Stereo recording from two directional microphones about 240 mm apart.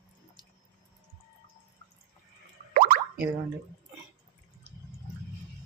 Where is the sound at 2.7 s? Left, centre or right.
Right.